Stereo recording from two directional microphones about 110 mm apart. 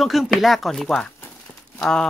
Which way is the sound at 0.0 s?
Centre (ahead or behind).